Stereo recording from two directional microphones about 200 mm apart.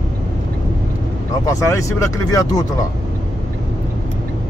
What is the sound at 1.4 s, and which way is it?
Speech, 15° left (ahead or behind).